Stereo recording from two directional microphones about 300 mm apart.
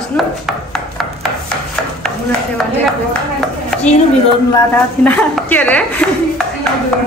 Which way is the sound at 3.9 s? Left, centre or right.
Left.